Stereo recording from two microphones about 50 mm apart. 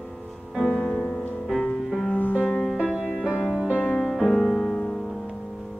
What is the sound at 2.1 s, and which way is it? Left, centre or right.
Music, left.